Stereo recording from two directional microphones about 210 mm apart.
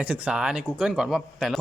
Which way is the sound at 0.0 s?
5° right (ahead or behind).